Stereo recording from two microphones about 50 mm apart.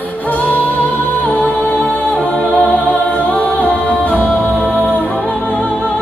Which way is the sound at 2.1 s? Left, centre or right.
Left.